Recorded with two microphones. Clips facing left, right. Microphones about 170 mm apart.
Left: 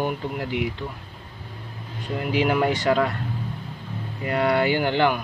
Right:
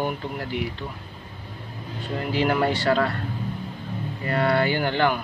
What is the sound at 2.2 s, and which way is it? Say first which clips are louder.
Speech: left 1 dB; 15° left (ahead or behind).